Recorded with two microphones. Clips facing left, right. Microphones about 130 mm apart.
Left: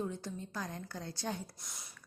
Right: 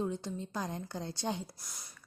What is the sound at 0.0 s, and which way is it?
Speech, 25° right (ahead or behind).